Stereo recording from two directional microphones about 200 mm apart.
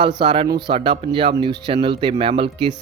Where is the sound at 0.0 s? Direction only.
25° right (ahead or behind).